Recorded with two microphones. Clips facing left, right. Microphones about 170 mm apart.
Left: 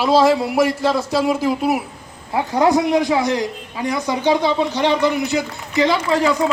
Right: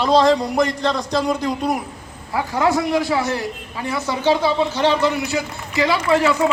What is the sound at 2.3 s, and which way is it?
A man's voice, 20° left (ahead or behind).